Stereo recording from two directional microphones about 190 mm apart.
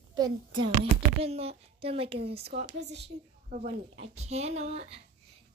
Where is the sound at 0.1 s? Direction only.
20° right (ahead or behind).